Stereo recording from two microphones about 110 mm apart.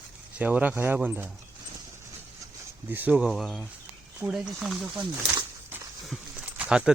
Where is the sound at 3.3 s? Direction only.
Centre (ahead or behind).